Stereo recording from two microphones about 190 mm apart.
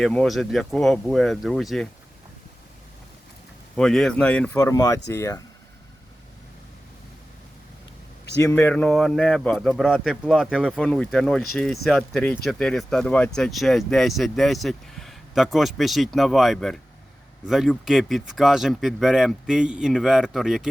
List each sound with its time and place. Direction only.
0.0 s speech: 5° left (ahead or behind)
3.8 s speech: 5° left (ahead or behind)
4.5 s speech: 20° left (ahead or behind)
8.4 s speech: 10° left (ahead or behind)